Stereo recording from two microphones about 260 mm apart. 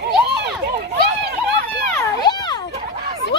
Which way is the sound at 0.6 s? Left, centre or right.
Right.